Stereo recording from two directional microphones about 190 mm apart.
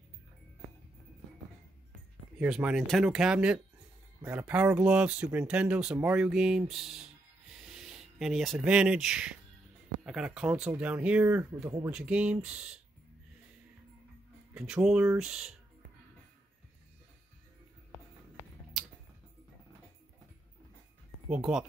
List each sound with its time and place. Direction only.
2.4 s speech: 5° right (ahead or behind)
14.5 s speech: 5° right (ahead or behind)
21.3 s speech: 5° right (ahead or behind)